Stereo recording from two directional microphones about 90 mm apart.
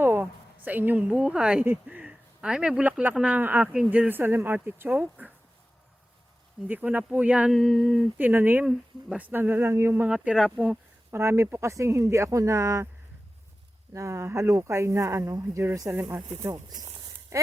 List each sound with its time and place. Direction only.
0.0 s a woman's voice: 25° right (ahead or behind)
6.7 s speech: 20° right (ahead or behind)
7.5 s a sound: centre (ahead or behind)
8.2 s speech: 20° right (ahead or behind); by 12.9 s 40° right (ahead or behind)
13.9 s speech: 35° right (ahead or behind)
16.4 s a sound: 35° right (ahead or behind)